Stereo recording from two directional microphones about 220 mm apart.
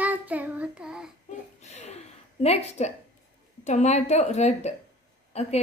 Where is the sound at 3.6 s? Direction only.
30° left (ahead or behind).